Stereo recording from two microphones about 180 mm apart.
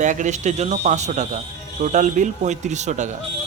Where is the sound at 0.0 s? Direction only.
45° right (ahead or behind).